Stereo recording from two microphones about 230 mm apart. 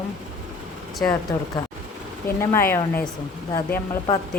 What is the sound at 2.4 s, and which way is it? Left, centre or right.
Speech, centre.